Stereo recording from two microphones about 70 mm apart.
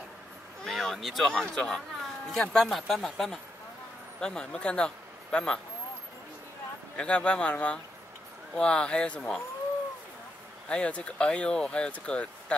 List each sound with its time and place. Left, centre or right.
0.7 s speech: centre
7.0 s speech: centre
10.7 s speech: centre